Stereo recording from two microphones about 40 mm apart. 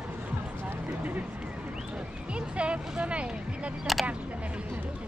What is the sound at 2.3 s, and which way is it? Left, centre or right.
Music, right.